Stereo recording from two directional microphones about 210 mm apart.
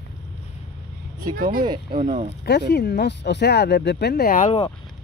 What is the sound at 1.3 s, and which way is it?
Speech, 40° right (ahead or behind).